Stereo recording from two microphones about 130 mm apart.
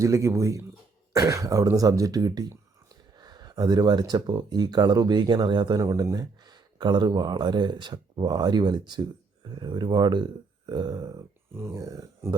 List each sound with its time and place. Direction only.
0.0 s speech: 20° right (ahead or behind)